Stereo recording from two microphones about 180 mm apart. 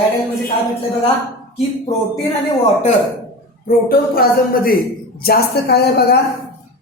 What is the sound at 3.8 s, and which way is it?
A man's voice, 55° left (ahead or behind).